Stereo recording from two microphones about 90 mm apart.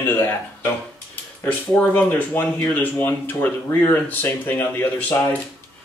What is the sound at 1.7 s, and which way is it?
Speech, 15° left (ahead or behind).